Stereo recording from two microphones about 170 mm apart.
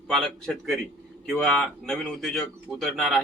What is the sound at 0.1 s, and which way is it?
A man's voice, centre (ahead or behind).